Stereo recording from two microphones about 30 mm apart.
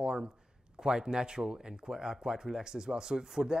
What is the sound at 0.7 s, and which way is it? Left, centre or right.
Speech, right.